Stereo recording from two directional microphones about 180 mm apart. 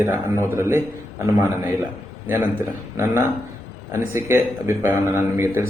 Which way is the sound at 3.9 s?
15° right (ahead or behind).